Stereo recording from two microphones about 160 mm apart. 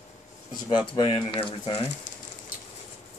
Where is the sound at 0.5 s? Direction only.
30° left (ahead or behind).